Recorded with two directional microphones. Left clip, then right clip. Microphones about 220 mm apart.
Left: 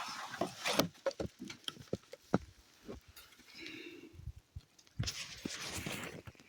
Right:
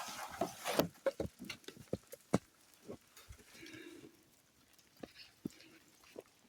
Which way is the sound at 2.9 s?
25° left (ahead or behind).